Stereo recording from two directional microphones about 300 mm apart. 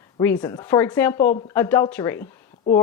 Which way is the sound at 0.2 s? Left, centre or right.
Centre.